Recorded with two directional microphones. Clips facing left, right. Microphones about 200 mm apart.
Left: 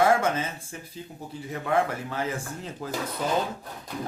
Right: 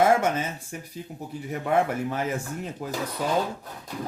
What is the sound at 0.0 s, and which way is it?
Speech, 20° right (ahead or behind).